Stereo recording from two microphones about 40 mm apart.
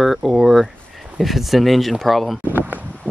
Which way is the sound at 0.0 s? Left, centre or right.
Centre.